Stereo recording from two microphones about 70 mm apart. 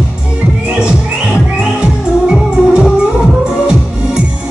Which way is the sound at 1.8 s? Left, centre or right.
Centre.